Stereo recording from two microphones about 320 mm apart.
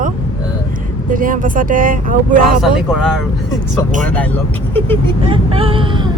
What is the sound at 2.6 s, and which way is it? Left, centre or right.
Speech, centre.